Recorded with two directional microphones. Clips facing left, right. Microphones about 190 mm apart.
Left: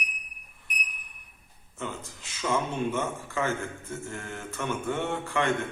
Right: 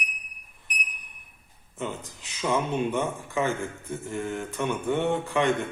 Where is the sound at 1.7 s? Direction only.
15° right (ahead or behind).